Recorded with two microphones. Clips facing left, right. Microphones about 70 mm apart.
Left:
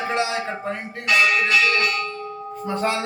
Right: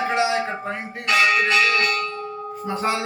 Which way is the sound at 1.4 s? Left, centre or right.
Right.